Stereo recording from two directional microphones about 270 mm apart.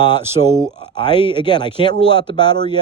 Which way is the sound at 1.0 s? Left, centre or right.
Centre.